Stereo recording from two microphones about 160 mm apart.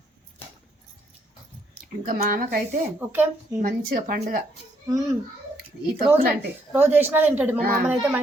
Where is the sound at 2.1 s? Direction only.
60° right (ahead or behind).